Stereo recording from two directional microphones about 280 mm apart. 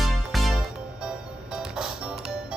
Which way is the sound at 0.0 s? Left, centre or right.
Centre.